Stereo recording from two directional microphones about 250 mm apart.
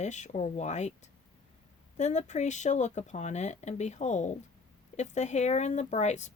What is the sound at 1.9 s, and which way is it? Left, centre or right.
Speech, left.